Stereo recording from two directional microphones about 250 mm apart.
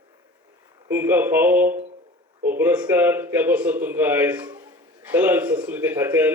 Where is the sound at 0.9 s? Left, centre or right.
Centre.